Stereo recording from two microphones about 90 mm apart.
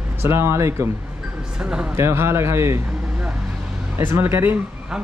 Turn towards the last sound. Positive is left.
turn(degrees=-25)  # may be behind; listen again after turning